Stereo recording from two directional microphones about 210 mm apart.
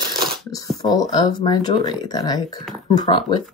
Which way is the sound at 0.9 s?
20° left (ahead or behind).